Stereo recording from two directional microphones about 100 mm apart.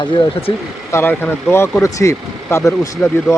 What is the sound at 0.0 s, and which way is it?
Speech, 50° left (ahead or behind).